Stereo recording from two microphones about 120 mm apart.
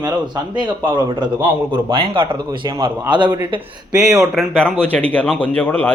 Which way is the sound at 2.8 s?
40° right (ahead or behind).